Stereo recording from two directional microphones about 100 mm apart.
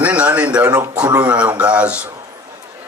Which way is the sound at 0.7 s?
35° right (ahead or behind).